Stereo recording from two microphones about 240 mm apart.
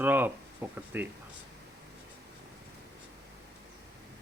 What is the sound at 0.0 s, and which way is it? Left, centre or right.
Speech, centre.